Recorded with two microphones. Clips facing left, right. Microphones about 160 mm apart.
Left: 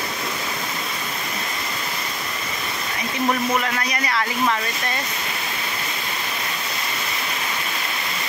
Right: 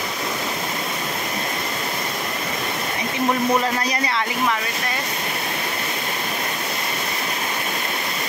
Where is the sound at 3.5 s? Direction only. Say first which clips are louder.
Right 3 dB; 30° right (ahead or behind).